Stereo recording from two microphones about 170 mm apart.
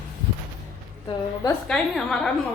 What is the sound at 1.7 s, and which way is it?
Speech, 5° left (ahead or behind).